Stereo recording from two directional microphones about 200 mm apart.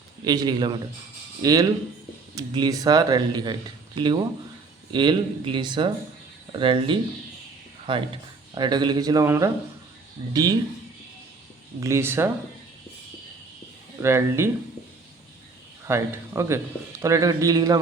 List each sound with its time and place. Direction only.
0.3 s speech: 20° right (ahead or behind)
11.8 s speech: 15° right (ahead or behind)
14.0 s speech: 15° right (ahead or behind)
15.9 s speech: 15° right (ahead or behind)